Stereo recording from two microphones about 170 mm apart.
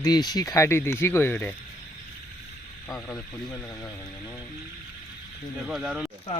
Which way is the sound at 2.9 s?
10° left (ahead or behind).